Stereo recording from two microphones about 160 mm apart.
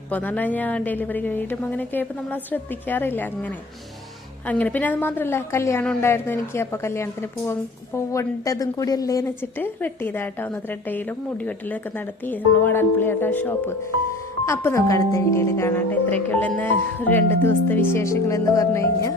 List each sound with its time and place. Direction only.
0.1 s a woman's voice: 10° left (ahead or behind)